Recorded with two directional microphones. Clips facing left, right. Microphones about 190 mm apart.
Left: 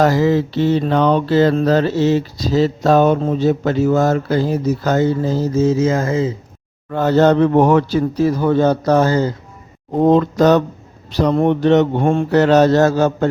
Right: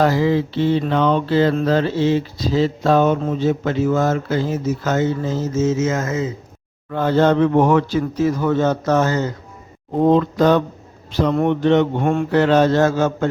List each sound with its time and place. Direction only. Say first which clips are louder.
0.0 s mantra: left 2 dB; 45° left (ahead or behind)
6.9 s mantra: left 3 dB; 40° left (ahead or behind)
10.0 s speech: left 2 dB; 40° left (ahead or behind)
11.1 s mantra: left 3 dB; 35° left (ahead or behind)